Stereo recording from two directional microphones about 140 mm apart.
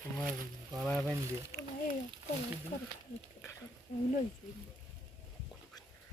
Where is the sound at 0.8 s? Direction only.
Centre (ahead or behind).